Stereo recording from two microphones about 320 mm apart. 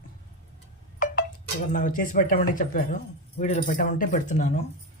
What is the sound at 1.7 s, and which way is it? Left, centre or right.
Speech, left.